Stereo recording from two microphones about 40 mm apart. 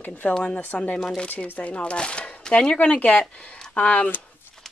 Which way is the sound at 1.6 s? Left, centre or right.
Left.